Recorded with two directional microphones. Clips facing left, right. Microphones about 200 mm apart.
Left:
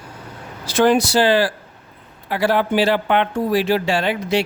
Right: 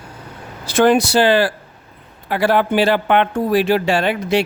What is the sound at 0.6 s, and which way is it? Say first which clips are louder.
Speech: right 2 dB; 55° right (ahead or behind).